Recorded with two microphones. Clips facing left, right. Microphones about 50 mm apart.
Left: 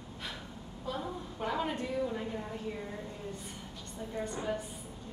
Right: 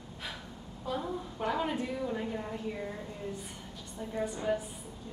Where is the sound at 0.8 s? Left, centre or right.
Centre.